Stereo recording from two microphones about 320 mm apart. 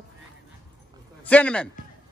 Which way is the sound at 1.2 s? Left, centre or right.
Centre.